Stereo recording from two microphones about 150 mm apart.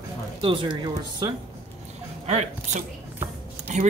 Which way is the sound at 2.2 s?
45° right (ahead or behind).